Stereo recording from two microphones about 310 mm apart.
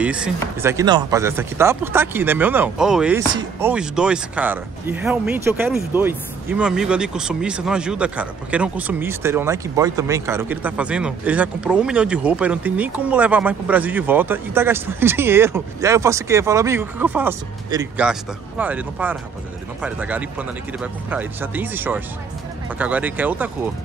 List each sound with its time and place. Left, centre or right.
0.0 s speech: centre